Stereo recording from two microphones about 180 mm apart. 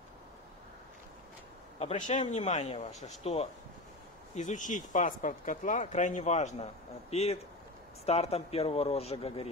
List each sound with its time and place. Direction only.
1.8 s speech: 40° left (ahead or behind)